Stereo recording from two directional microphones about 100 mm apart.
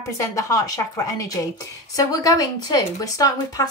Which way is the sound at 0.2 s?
35° left (ahead or behind).